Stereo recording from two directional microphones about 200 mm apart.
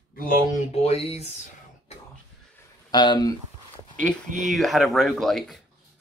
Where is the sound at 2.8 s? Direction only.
20° left (ahead or behind).